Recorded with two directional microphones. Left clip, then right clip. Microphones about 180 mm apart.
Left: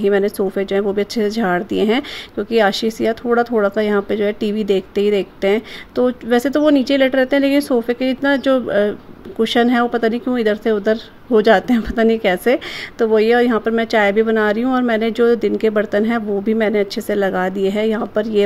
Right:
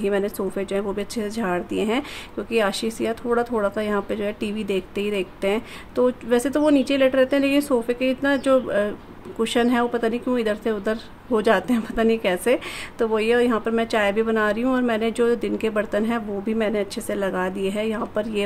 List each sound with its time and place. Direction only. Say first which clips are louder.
0.0 s a woman's voice: left 7 dB; 20° left (ahead or behind)